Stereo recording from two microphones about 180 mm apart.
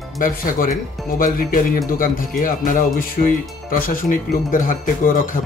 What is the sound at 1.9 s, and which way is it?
Speech, 50° left (ahead or behind).